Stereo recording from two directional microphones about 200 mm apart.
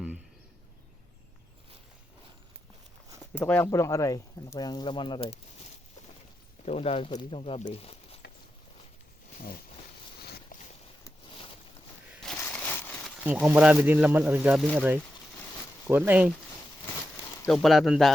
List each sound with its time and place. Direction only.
3.2 s speech: 10° left (ahead or behind); by 5.4 s 25° left (ahead or behind)
6.7 s speech: 30° left (ahead or behind)
10.2 s a sound: 50° left (ahead or behind)
12.4 s a sound: 10° left (ahead or behind)
13.2 s speech: 10° right (ahead or behind)
17.5 s speech: centre (ahead or behind)